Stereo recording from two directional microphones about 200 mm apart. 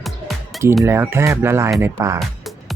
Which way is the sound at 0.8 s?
15° right (ahead or behind).